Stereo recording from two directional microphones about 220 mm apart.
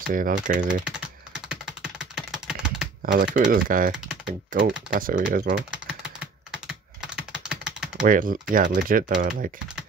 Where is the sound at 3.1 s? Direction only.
40° right (ahead or behind).